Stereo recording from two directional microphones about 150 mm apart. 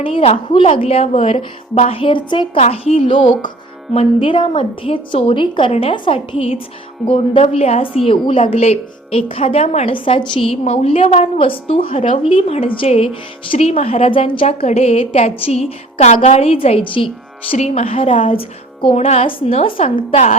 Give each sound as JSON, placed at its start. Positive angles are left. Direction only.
{"t": 0.0, "sound": "a woman's voice", "side_deg": 40}
{"t": 2.6, "sound": "a woman's voice", "side_deg": 45}